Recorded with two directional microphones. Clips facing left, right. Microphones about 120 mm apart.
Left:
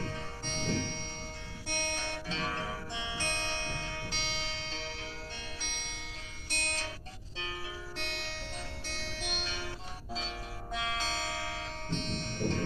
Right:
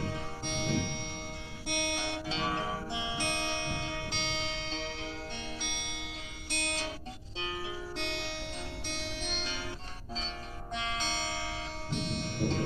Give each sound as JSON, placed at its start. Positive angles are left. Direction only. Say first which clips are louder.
{"t": 0.0, "sound": "music", "louder": "right 3 dB", "side_deg": -15}
{"t": 6.5, "sound": "music", "louder": "right 3 dB", "side_deg": -15}
{"t": 8.0, "sound": "music", "louder": "right 3 dB", "side_deg": -20}
{"t": 10.1, "sound": "music", "louder": "even", "side_deg": 5}
{"t": 11.9, "sound": "music", "louder": "right 2 dB", "side_deg": -10}